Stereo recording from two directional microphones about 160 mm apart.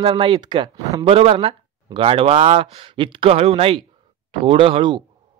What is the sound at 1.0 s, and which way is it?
Speech, 35° right (ahead or behind).